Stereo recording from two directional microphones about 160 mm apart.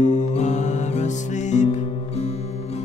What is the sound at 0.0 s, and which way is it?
Music, 50° left (ahead or behind).